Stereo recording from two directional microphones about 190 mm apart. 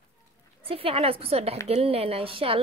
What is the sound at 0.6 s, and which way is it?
A woman's voice, 30° right (ahead or behind).